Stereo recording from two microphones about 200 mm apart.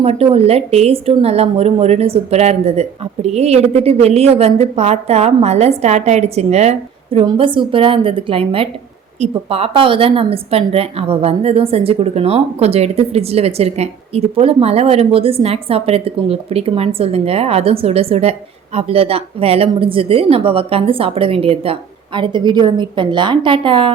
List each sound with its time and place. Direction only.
0.0 s a woman's voice: 30° right (ahead or behind)